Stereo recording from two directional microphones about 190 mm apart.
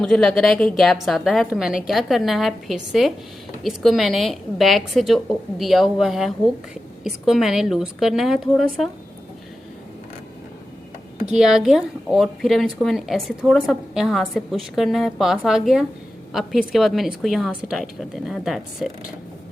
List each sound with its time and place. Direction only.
0.0 s a woman's voice: 5° left (ahead or behind)
11.3 s a woman's voice: centre (ahead or behind)